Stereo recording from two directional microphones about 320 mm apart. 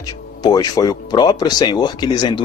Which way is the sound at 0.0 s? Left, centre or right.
Centre.